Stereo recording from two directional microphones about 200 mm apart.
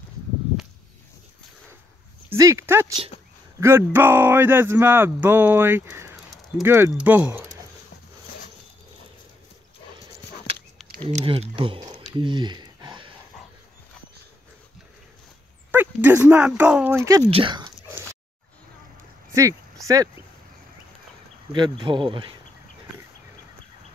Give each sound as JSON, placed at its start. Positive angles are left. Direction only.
{"t": 2.3, "sound": "speech", "side_deg": -15}
{"t": 11.0, "sound": "speech", "side_deg": -30}
{"t": 12.2, "sound": "a sound", "side_deg": -25}
{"t": 15.7, "sound": "speech", "side_deg": -10}
{"t": 17.3, "sound": "speech", "side_deg": -25}
{"t": 19.3, "sound": "a sound", "side_deg": -15}
{"t": 21.5, "sound": "speech", "side_deg": -25}